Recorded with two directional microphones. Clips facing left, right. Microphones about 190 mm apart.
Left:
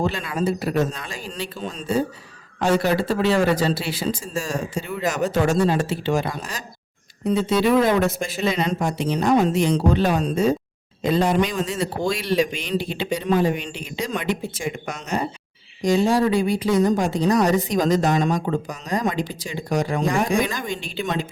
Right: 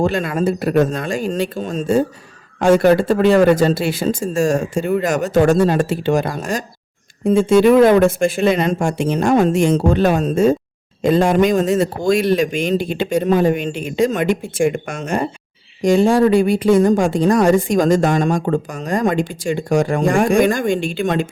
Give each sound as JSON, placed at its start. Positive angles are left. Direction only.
{"t": 0.0, "sound": "a woman's voice", "side_deg": -45}